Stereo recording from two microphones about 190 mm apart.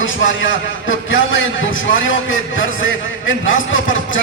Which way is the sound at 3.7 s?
90° left.